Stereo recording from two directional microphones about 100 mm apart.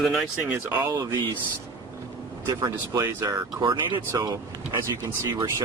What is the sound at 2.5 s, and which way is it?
Speech, 40° right (ahead or behind).